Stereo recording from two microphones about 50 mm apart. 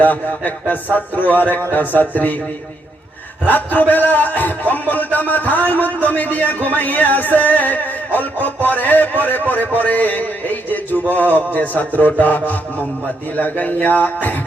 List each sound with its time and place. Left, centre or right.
0.0 s a man's voice: left
3.5 s a man's voice: left